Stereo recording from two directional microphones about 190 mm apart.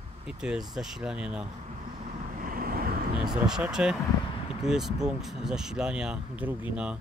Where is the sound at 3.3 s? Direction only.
5° right (ahead or behind).